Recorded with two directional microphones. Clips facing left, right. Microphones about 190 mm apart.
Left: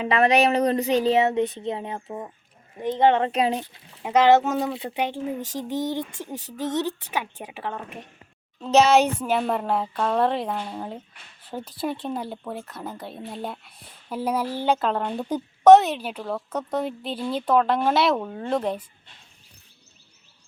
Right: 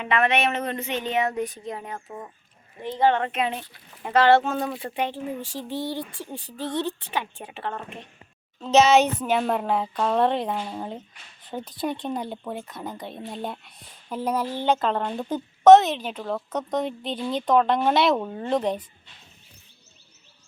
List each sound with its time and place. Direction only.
0.0 s speech: 35° left (ahead or behind)
3.7 s a woman's voice: 15° left (ahead or behind)
9.2 s a woman's voice: centre (ahead or behind)